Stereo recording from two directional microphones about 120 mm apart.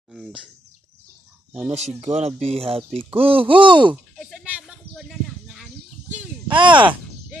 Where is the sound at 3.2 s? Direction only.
50° right (ahead or behind).